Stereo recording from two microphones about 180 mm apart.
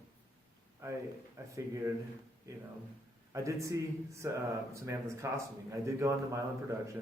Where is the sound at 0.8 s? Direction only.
15° right (ahead or behind).